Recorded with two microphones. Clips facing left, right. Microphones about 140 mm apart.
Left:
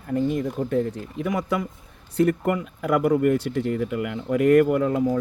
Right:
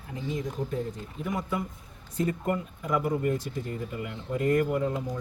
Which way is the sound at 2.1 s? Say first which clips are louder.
Left 7 dB; 70° left (ahead or behind).